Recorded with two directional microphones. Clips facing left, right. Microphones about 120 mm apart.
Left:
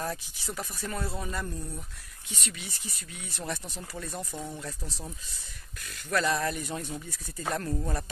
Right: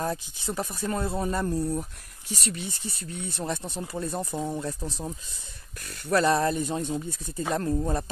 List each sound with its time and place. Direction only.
0.0 s speech: 25° right (ahead or behind)